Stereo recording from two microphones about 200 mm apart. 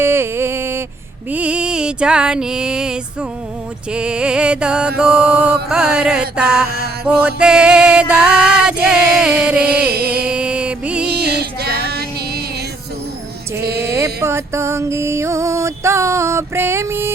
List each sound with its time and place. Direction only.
0.0 s a sound: 10° right (ahead or behind)
3.9 s music: 5° right (ahead or behind)
9.9 s a sound: 50° right (ahead or behind)
10.2 s music: 5° right (ahead or behind)
11.1 s music: 55° right (ahead or behind)
13.8 s music: 15° right (ahead or behind)